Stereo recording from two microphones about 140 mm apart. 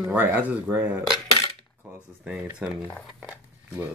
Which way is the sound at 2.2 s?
5° right (ahead or behind).